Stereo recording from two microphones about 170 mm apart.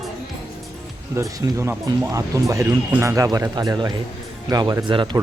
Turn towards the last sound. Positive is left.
turn(degrees=-15)  # may be behind; listen again after turning